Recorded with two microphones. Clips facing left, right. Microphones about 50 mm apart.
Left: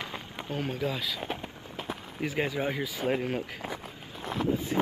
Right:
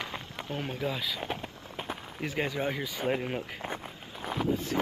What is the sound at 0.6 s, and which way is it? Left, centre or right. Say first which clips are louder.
Speech: left 2 dB; centre.